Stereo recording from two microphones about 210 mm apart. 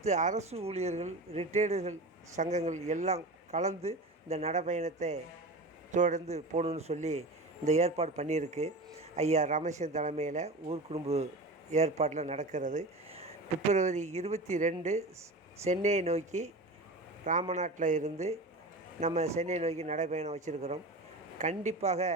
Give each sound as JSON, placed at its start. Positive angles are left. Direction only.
{"t": 0.0, "sound": "a man's voice", "side_deg": -35}
{"t": 17.5, "sound": "a man's voice", "side_deg": -35}